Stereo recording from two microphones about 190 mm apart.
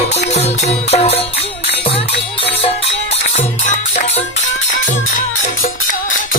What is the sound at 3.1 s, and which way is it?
Music, 40° left (ahead or behind).